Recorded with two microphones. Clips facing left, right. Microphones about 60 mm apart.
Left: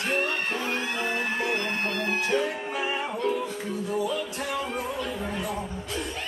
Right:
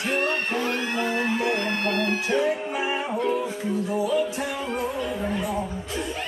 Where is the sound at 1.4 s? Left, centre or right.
Right.